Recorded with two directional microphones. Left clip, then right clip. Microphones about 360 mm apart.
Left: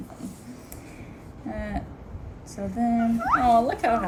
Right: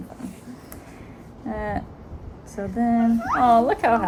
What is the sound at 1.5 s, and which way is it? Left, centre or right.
Speech, centre.